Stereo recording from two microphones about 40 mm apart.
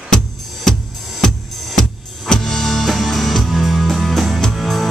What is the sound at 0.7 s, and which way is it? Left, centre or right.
Music, centre.